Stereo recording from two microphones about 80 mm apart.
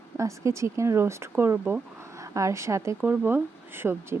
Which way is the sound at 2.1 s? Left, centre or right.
Right.